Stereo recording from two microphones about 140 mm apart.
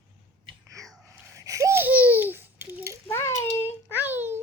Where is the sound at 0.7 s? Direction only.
25° right (ahead or behind).